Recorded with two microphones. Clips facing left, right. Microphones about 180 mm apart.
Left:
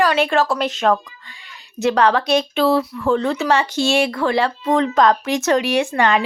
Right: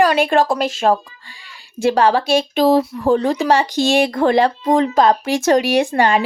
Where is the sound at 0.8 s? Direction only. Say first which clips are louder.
Right 1 dB; 30° right (ahead or behind).